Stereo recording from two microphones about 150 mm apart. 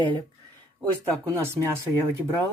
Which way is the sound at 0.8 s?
20° right (ahead or behind).